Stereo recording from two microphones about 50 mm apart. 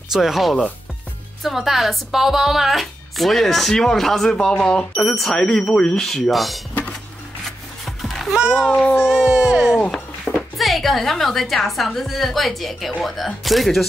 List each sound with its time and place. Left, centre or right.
0.1 s a woman's voice: centre; by 5.0 s left
5.0 s speech: centre
6.3 s a woman's voice: centre
7.4 s music: centre
8.4 s a child's voice: centre
10.3 s music: centre
10.6 s a woman's voice: centre